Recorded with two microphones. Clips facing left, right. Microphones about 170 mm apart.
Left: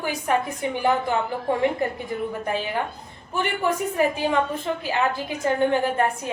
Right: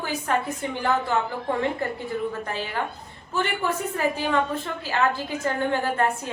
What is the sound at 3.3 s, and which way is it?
A man's voice, 15° left (ahead or behind).